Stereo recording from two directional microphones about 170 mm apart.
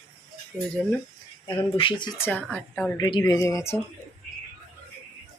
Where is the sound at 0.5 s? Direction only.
Centre (ahead or behind).